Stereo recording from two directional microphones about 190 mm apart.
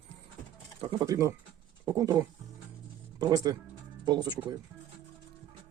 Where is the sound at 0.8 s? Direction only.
20° right (ahead or behind).